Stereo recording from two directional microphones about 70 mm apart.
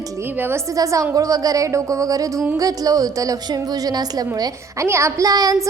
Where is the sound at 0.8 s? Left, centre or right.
Right.